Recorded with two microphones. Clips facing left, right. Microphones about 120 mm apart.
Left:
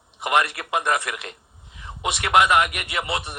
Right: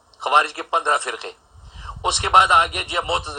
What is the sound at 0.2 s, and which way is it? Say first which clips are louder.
A man's voice: right 3 dB; 25° right (ahead or behind).